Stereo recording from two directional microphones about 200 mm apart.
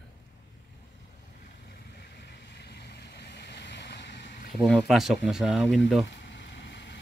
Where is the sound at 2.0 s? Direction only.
55° left (ahead or behind).